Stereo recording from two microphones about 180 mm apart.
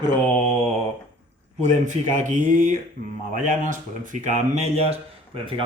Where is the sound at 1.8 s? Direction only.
45° right (ahead or behind).